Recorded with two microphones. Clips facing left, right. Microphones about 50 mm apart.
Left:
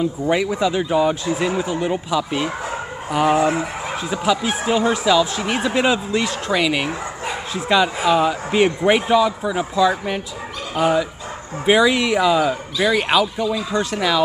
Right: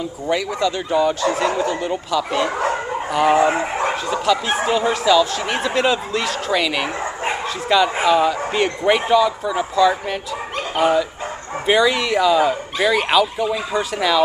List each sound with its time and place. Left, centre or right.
0.3 s speech: centre
3.3 s speech: right
4.1 s speech: centre